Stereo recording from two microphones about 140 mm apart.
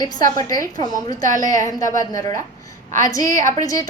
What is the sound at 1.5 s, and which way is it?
Speech, 65° right (ahead or behind).